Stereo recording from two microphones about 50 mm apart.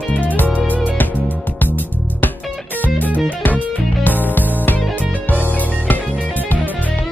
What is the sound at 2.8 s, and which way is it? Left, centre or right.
Music, left.